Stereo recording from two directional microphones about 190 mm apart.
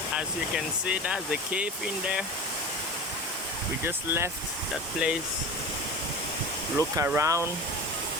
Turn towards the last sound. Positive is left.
turn(degrees=-15)  # may be behind; listen again after turning